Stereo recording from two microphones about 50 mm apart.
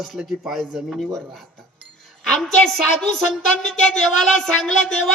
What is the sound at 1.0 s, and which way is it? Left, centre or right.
Speech, centre.